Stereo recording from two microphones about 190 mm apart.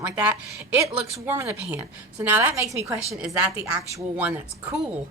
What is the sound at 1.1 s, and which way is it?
Speech, 15° right (ahead or behind).